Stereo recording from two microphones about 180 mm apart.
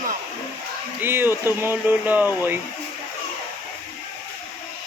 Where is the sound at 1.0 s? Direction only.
10° right (ahead or behind).